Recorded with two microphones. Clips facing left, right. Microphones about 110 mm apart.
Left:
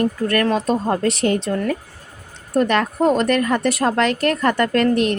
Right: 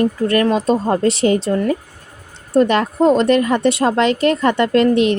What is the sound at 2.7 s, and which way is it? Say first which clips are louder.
Speech: right 3 dB; 30° right (ahead or behind).